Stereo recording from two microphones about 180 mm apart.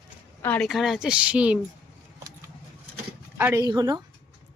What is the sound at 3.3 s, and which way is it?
Speech, 15° right (ahead or behind).